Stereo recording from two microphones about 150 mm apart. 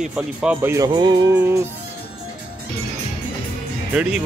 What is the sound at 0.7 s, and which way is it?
Music, 25° right (ahead or behind).